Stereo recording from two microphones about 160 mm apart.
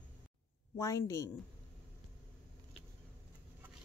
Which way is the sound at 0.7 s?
20° left (ahead or behind).